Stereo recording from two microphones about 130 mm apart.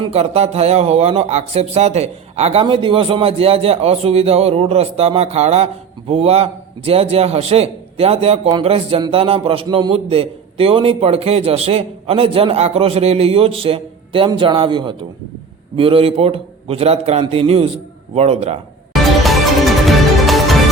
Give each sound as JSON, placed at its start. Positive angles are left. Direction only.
{"t": 0.1, "sound": "a man's voice", "side_deg": -55}
{"t": 19.2, "sound": "music", "side_deg": 0}